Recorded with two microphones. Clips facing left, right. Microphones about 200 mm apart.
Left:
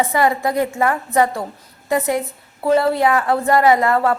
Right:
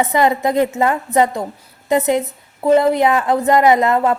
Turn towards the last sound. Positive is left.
turn(degrees=-20)  # may be behind; listen again after turning